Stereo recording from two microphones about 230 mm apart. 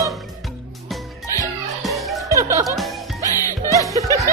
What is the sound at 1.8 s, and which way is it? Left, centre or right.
Music, centre.